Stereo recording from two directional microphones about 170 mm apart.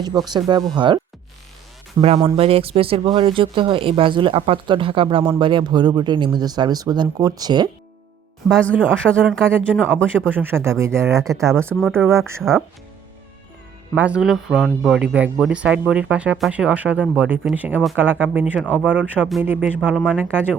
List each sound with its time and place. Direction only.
0.3 s speech: 25° right (ahead or behind)
2.0 s speech: 35° right (ahead or behind)
8.4 s speech: 5° left (ahead or behind)
8.7 s speech: 10° right (ahead or behind)
9.0 s speech: 5° left (ahead or behind)
10.2 s speech: 10° right (ahead or behind)
11.7 s speech: 5° left (ahead or behind)
12.0 s speech: 15° right (ahead or behind)
12.4 s speech: centre (ahead or behind)
13.9 s speech: 10° right (ahead or behind)